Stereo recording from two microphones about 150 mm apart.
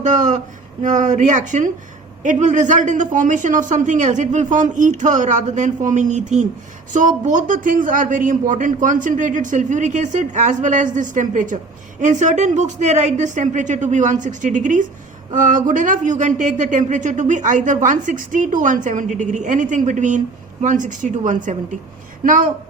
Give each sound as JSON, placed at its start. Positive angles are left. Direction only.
{"t": 0.0, "sound": "a man's voice", "side_deg": -55}